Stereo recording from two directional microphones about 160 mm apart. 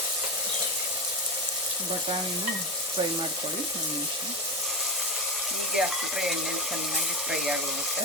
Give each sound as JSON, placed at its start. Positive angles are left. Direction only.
{"t": 5.7, "sound": "speech", "side_deg": -5}